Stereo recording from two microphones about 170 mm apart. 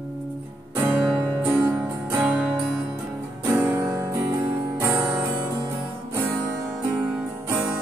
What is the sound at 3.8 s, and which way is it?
Music, 25° right (ahead or behind).